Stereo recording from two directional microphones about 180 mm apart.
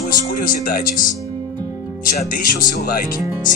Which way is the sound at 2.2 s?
50° left (ahead or behind).